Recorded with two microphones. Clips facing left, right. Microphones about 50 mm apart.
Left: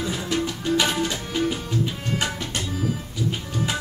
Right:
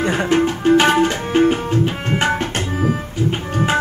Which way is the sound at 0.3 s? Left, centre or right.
Right.